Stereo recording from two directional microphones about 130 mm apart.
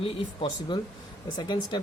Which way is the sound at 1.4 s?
35° left (ahead or behind).